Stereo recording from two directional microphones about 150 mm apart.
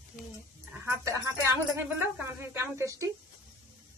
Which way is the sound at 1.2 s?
20° right (ahead or behind).